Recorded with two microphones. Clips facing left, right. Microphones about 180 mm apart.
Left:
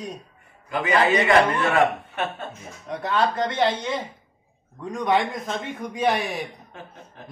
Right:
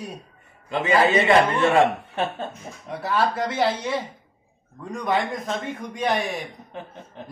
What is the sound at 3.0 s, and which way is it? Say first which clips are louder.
Speech: even; 5° right (ahead or behind).